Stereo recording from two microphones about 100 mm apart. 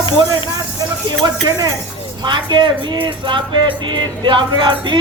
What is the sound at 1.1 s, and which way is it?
A woman's voice, 50° right (ahead or behind).